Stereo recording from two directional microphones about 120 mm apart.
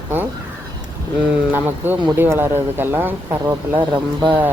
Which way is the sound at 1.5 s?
15° right (ahead or behind).